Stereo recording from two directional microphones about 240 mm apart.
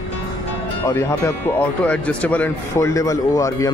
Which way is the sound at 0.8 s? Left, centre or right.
Centre.